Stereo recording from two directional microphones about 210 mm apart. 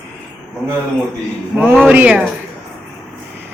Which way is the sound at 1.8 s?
5° right (ahead or behind).